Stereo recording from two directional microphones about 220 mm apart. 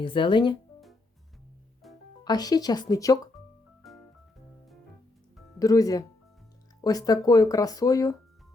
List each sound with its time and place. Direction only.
0.0 s speech: 20° left (ahead or behind)
1.8 s music: centre (ahead or behind)
2.2 s speech: 15° left (ahead or behind)
3.8 s organ: centre (ahead or behind)
5.5 s speech: 15° left (ahead or behind)